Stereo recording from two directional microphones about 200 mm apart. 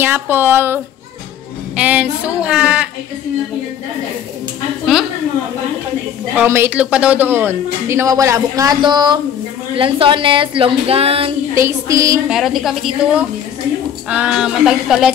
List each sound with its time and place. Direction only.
0.0 s speech: 10° right (ahead or behind)
1.8 s speech: 5° right (ahead or behind)
6.3 s speech: 10° right (ahead or behind)
9.8 s a sound: 25° right (ahead or behind)
11.5 s speech: 15° right (ahead or behind)
12.3 s speech: centre (ahead or behind)